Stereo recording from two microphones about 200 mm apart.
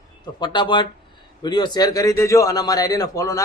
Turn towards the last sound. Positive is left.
turn(degrees=15)  # may be behind; listen again after turning